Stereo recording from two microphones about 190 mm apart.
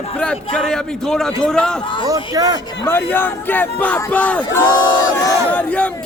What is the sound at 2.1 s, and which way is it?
Speech, 20° right (ahead or behind).